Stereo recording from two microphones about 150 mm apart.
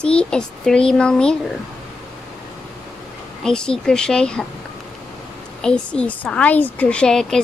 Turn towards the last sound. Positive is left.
turn(degrees=5)  # may be behind; listen again after turning